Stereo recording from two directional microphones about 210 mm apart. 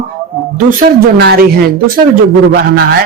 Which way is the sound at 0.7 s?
45° right (ahead or behind).